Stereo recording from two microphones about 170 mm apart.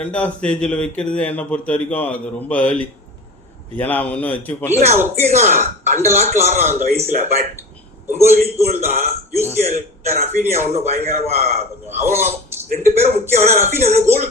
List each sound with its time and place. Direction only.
0.0 s a man's voice: 5° left (ahead or behind)
4.8 s a man's voice: 40° right (ahead or behind)
8.5 s a man's voice: 40° right (ahead or behind)